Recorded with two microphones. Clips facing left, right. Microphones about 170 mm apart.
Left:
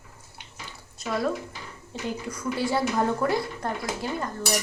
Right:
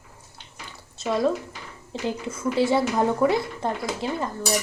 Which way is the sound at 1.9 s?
30° right (ahead or behind).